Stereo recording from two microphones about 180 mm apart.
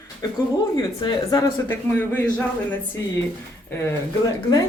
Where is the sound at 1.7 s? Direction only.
10° left (ahead or behind).